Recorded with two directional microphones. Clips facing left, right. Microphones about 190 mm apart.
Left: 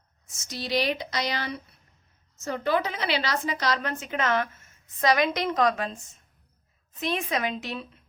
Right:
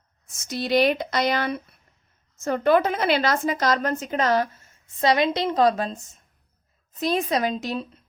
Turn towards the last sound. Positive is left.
turn(degrees=-40)  # may be behind; listen again after turning